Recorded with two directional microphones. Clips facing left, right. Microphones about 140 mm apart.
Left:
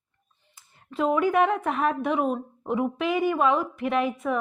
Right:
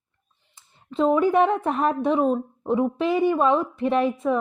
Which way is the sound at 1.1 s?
30° right (ahead or behind).